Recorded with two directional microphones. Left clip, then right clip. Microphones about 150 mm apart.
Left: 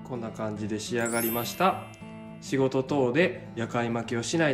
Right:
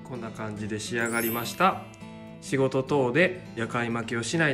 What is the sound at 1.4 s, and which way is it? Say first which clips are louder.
Speech: right 3 dB; 10° left (ahead or behind).